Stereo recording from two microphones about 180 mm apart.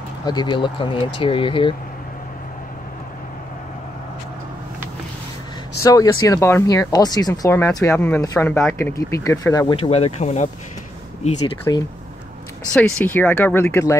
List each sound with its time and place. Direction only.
0.2 s speech: 25° left (ahead or behind)
5.8 s speech: 20° left (ahead or behind)
9.8 s speech: 35° left (ahead or behind)
11.7 s speech: 20° left (ahead or behind)
12.7 s speech: 10° left (ahead or behind)